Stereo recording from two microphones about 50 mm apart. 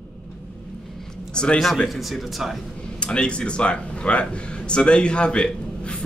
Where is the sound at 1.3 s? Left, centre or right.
Centre.